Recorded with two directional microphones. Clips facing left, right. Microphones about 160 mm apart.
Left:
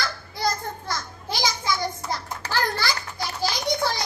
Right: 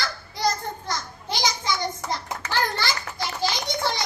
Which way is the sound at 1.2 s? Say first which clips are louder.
Even; 20° right (ahead or behind).